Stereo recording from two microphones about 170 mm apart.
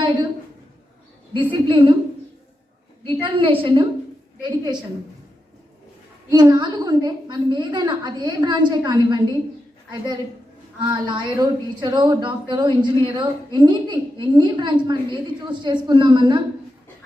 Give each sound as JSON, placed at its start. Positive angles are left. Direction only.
{"t": 0.0, "sound": "a woman's voice", "side_deg": -25}
{"t": 1.6, "sound": "a woman's voice", "side_deg": -30}
{"t": 3.0, "sound": "a woman's voice", "side_deg": -30}
{"t": 6.3, "sound": "a woman's voice", "side_deg": -25}
{"t": 10.9, "sound": "a woman's voice", "side_deg": -25}